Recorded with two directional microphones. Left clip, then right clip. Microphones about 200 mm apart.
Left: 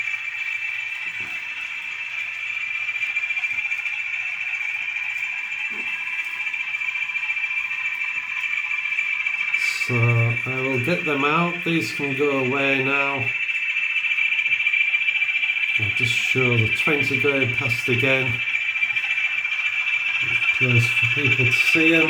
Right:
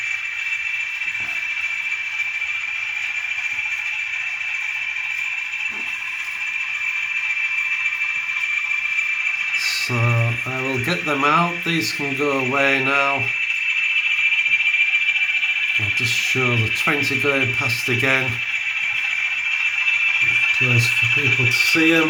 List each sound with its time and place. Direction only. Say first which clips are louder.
10.8 s a sound: right 4 dB; 5° right (ahead or behind)
16.4 s speech: even; 10° right (ahead or behind)
20.8 s speech: right 2 dB; 20° left (ahead or behind)
21.5 s speech: even; 10° right (ahead or behind)